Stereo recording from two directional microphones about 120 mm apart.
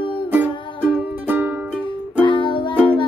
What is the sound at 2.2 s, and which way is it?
Music, 40° left (ahead or behind).